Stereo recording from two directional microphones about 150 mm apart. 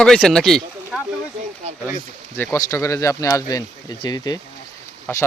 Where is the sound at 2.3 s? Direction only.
15° left (ahead or behind).